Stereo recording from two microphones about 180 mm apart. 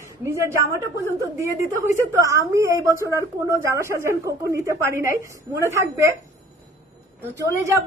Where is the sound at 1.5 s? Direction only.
15° right (ahead or behind).